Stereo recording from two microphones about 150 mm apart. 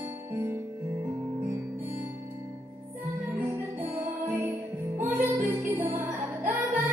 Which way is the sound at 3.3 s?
15° right (ahead or behind).